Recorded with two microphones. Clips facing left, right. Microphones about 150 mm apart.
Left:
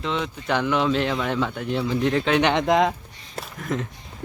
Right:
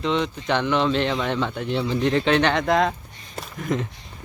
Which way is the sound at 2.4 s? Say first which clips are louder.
Left 1 dB; 15° left (ahead or behind).